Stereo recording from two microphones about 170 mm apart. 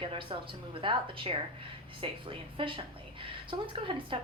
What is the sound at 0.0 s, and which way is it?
A woman's voice, 30° right (ahead or behind).